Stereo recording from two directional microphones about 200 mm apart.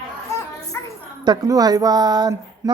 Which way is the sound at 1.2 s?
20° right (ahead or behind).